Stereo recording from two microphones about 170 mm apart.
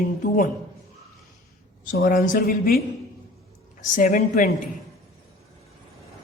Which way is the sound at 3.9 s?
50° left (ahead or behind).